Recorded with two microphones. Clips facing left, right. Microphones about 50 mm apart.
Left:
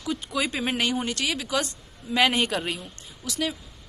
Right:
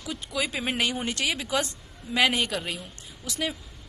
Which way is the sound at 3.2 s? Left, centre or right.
Centre.